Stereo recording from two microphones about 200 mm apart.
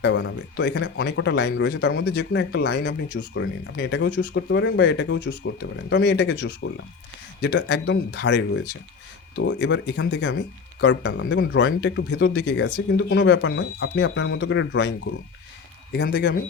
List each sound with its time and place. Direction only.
0.0 s speech: 65° left (ahead or behind)
15.9 s speech: 50° left (ahead or behind)